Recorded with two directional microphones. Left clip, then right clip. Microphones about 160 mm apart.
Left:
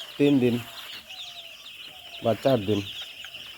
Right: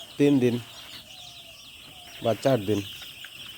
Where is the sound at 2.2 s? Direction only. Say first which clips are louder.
Left 1 dB; 10° right (ahead or behind).